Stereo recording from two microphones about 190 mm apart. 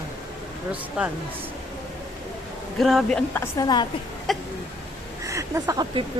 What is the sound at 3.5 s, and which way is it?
Speech, 20° left (ahead or behind).